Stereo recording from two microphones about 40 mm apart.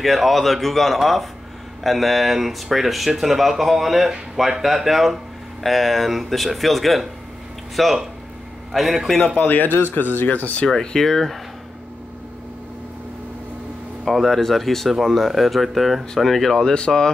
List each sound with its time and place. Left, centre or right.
0.0 s speech: centre
9.4 s speech: left
10.2 s speech: left
10.7 s speech: centre
14.0 s speech: centre
16.7 s speech: left